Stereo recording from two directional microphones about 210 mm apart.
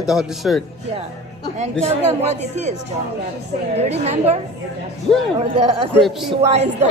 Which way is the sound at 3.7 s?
30° right (ahead or behind).